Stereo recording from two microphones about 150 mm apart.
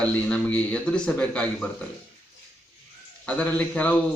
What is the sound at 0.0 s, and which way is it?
A man's voice, 5° left (ahead or behind).